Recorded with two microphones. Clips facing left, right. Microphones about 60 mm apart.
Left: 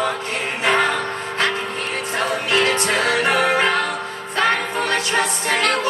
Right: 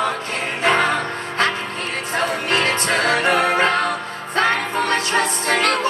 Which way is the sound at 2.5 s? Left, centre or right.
Right.